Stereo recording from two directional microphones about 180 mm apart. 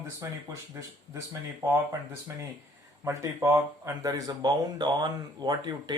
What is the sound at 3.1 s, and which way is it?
Speech, 15° right (ahead or behind).